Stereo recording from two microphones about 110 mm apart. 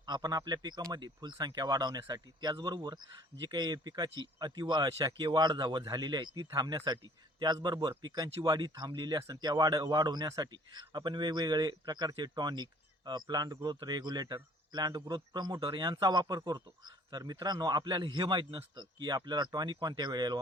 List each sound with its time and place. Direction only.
0.0 s a man's voice: 40° right (ahead or behind)
10.2 s a man's voice: 30° right (ahead or behind)
10.5 s a man's voice: 45° right (ahead or behind)